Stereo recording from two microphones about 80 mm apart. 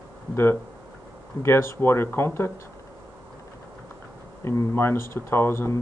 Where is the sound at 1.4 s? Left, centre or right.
Left.